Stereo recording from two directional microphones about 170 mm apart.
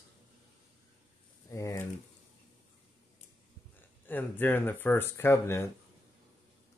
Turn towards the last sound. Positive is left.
turn(degrees=15)  # may be behind; listen again after turning